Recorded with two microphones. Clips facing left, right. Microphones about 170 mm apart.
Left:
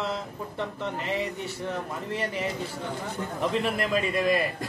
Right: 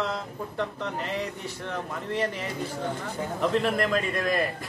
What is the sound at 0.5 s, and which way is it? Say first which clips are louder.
Speech: right 1 dB; centre (ahead or behind).